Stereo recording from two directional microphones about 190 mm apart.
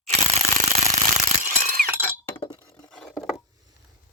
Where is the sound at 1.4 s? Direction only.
45° right (ahead or behind).